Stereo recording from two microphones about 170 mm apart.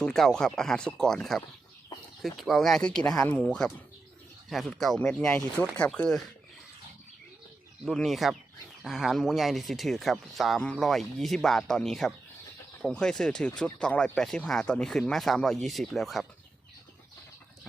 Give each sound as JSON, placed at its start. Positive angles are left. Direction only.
{"t": 0.0, "sound": "speech", "side_deg": 5}
{"t": 7.9, "sound": "speech", "side_deg": 0}